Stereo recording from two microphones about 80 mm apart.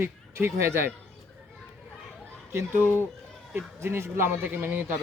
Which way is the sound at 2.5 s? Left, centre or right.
Right.